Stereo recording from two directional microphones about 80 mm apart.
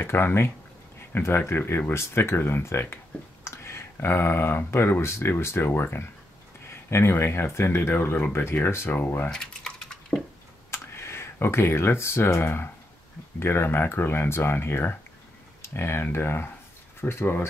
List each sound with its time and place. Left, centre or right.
0.0 s speech: left
9.3 s typing: centre
10.7 s speech: left